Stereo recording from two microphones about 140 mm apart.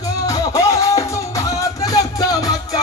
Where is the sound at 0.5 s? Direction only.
20° left (ahead or behind).